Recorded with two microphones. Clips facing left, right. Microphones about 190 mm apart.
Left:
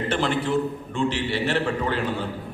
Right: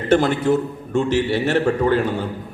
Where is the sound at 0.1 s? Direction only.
45° right (ahead or behind).